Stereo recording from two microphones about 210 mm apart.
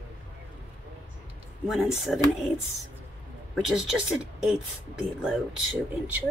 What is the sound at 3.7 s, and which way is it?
Speech, centre (ahead or behind).